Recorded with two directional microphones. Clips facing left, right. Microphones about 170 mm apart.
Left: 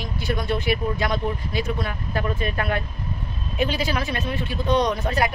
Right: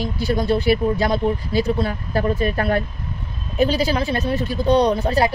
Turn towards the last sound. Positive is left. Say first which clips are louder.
# right 5 dB
turn(degrees=-35)  # may be behind; listen again after turning